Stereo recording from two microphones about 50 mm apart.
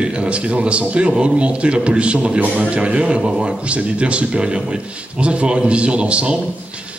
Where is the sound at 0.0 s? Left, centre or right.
Right.